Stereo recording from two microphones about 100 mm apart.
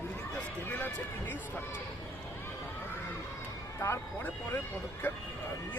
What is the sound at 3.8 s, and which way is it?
Speech, 30° left (ahead or behind).